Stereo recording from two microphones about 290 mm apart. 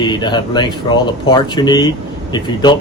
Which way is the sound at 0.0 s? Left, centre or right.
Centre.